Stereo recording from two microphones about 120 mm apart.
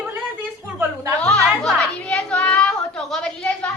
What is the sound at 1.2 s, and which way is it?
Music, 5° left (ahead or behind).